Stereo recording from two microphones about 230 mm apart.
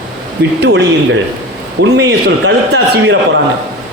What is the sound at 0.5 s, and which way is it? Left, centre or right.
Speech, right.